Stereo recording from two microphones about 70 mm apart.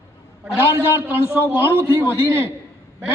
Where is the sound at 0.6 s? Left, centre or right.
Right.